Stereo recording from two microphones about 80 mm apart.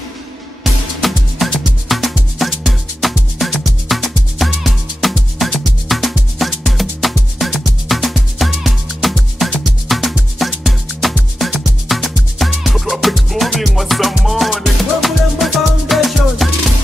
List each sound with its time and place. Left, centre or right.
1.0 s music: centre